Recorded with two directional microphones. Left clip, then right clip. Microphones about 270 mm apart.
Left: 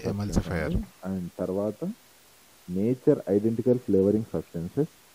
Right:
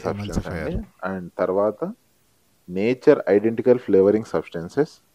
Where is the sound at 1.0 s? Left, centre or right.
Centre.